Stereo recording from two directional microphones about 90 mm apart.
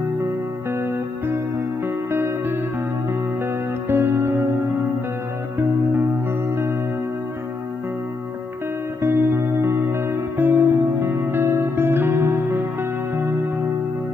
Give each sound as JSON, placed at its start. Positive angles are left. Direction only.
{"t": 0.7, "sound": "music", "side_deg": -30}
{"t": 3.9, "sound": "music", "side_deg": -25}
{"t": 9.0, "sound": "music", "side_deg": -25}